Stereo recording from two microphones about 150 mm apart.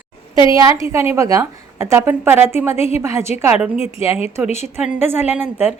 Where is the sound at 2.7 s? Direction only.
45° left (ahead or behind).